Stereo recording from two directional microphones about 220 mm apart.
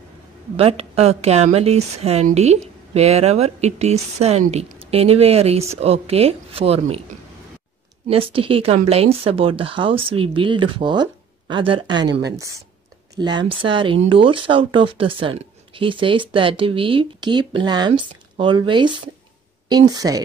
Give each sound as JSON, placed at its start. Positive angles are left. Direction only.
{"t": 0.6, "sound": "speech", "side_deg": -25}
{"t": 8.1, "sound": "speech", "side_deg": -25}
{"t": 12.1, "sound": "a woman's voice", "side_deg": -50}
{"t": 12.4, "sound": "speech", "side_deg": -15}